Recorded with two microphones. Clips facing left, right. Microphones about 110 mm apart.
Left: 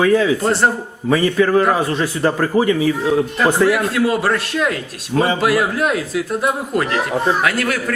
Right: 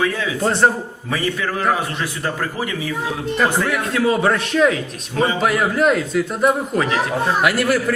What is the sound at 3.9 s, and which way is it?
A man's voice, 5° left (ahead or behind).